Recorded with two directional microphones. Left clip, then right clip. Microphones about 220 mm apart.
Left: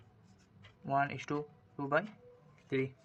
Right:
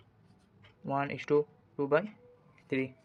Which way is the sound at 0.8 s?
20° right (ahead or behind).